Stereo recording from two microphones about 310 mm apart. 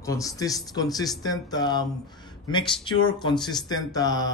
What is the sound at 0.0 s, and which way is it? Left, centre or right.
A man's voice, centre.